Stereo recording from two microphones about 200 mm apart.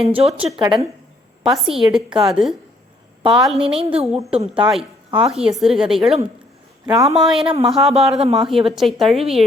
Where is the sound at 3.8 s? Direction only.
30° right (ahead or behind).